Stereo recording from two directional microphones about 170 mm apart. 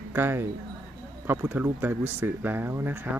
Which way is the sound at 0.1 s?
15° right (ahead or behind).